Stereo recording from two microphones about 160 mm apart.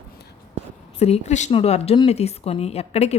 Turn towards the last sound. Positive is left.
turn(degrees=40)  # may be behind; listen again after turning